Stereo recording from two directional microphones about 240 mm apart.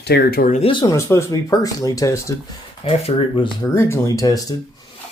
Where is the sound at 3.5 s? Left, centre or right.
Centre.